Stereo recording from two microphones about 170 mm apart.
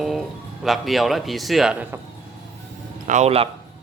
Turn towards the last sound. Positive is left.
turn(degrees=-40)  # may be behind; listen again after turning